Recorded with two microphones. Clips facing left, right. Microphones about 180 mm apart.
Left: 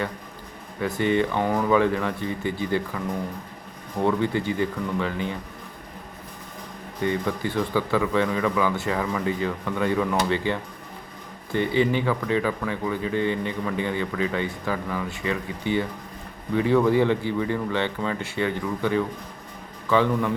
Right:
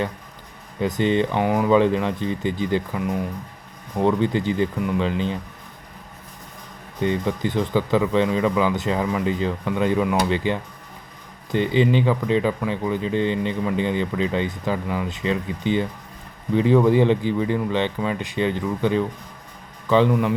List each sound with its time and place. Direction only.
0.8 s speech: 20° right (ahead or behind)
7.0 s a man's voice: 20° right (ahead or behind)